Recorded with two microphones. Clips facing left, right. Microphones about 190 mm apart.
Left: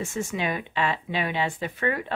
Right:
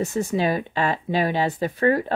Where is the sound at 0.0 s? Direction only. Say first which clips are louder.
Right 6 dB; 35° right (ahead or behind).